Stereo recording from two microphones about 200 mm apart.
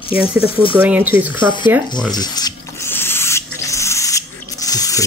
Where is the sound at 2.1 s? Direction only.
20° left (ahead or behind).